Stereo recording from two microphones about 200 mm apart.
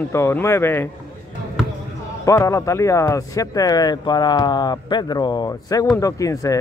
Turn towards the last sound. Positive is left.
turn(degrees=15)  # may be behind; listen again after turning